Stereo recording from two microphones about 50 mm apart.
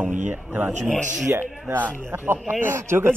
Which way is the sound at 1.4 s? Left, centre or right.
Right.